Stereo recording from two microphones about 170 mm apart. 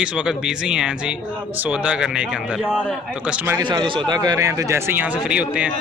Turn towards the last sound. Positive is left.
turn(degrees=-5)  # may be behind; listen again after turning